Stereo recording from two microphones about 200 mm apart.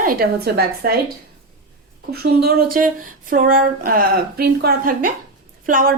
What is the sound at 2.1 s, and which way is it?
A woman's voice, 50° right (ahead or behind).